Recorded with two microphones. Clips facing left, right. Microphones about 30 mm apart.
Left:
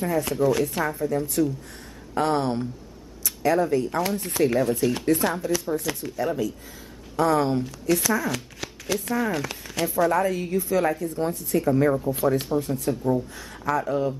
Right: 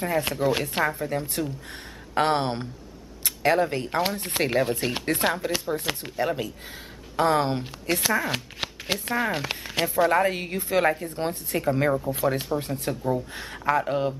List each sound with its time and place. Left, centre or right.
0.0 s speech: right